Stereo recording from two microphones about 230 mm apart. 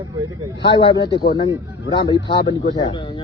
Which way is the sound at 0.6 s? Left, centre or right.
Left.